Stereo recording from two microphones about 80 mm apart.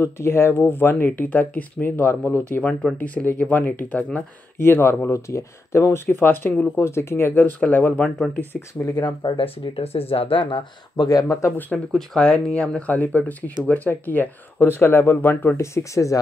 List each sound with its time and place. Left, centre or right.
0.0 s speech: left
8.8 s speech: left
9.9 s speech: left
11.1 s speech: left
11.9 s speech: centre; by 16.2 s left